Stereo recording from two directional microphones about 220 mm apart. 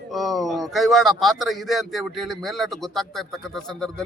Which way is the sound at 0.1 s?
Centre (ahead or behind).